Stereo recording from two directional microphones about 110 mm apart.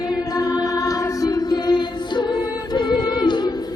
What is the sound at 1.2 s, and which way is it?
Music, 35° left (ahead or behind).